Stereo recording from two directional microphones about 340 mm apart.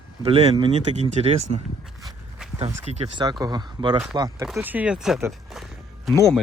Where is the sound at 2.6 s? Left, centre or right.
Centre.